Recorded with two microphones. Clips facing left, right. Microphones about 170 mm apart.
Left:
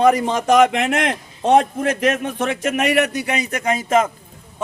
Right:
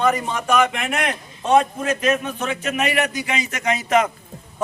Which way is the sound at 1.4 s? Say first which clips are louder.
Left 2 dB; 70° left (ahead or behind).